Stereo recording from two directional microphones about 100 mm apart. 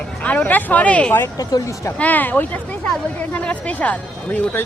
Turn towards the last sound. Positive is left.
turn(degrees=15)  # may be behind; listen again after turning